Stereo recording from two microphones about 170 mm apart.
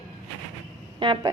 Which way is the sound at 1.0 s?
30° right (ahead or behind).